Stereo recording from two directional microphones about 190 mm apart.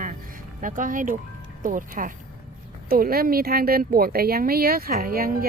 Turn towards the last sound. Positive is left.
turn(degrees=-50)  # may be behind; listen again after turning